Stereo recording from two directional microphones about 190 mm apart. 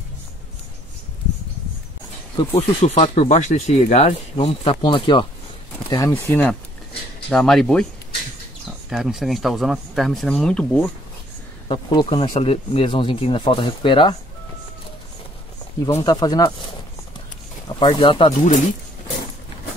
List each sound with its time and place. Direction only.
2.6 s speech: 35° left (ahead or behind)
5.9 s speech: 15° left (ahead or behind)
8.9 s speech: centre (ahead or behind)
11.7 s speech: 25° left (ahead or behind)
15.9 s speech: 25° left (ahead or behind)
17.6 s speech: 25° left (ahead or behind)
18.3 s speech: 40° left (ahead or behind)